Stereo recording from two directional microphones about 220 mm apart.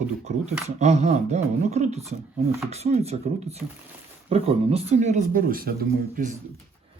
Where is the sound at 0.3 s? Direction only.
30° right (ahead or behind).